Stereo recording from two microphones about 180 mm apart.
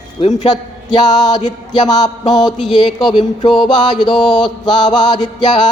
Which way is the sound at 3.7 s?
25° left (ahead or behind).